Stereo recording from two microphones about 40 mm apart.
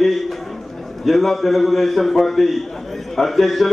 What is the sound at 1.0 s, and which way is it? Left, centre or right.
Mantra, centre.